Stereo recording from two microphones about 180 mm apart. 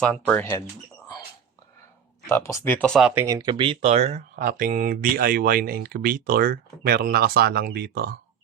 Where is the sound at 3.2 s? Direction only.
20° right (ahead or behind).